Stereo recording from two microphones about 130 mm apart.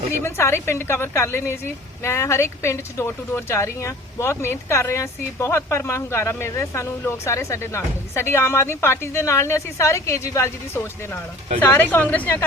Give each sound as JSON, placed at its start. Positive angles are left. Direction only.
{"t": 0.2, "sound": "a woman's voice", "side_deg": 20}